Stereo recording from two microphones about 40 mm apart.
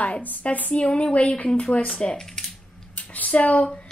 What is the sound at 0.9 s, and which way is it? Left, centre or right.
Speech, left.